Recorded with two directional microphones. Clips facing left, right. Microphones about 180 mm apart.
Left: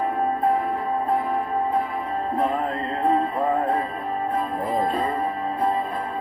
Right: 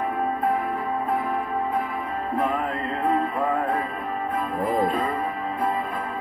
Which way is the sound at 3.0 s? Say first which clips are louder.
Left 2 dB; 30° left (ahead or behind).